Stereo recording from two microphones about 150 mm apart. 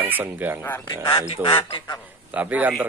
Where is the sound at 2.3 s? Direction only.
10° right (ahead or behind).